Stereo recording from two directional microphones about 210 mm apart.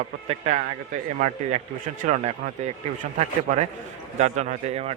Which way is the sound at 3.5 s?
35° right (ahead or behind).